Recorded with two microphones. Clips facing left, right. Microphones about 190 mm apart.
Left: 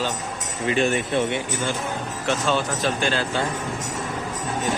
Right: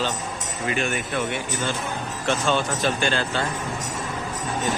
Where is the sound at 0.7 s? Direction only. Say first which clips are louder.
Left 5 dB; 30° left (ahead or behind).